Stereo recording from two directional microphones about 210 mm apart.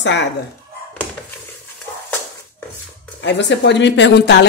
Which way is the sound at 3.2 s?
55° left (ahead or behind).